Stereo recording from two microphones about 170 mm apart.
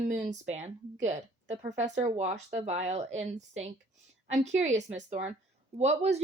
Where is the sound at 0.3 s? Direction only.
40° right (ahead or behind).